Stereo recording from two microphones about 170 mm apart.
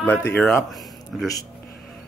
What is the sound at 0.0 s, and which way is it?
Speech, 10° left (ahead or behind).